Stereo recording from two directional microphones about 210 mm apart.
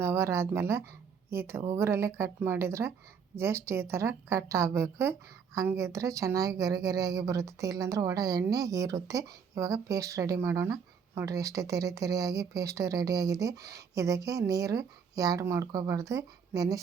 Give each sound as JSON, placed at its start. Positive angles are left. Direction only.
{"t": 0.0, "sound": "speech", "side_deg": -10}